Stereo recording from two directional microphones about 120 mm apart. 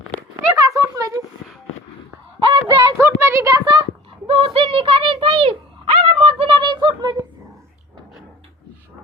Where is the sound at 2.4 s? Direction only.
40° right (ahead or behind).